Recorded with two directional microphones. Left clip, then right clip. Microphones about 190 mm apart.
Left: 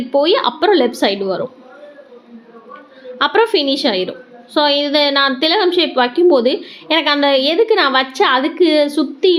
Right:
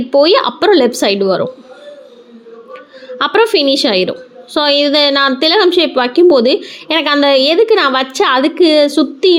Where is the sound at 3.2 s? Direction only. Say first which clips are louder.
Right 3 dB; 30° right (ahead or behind).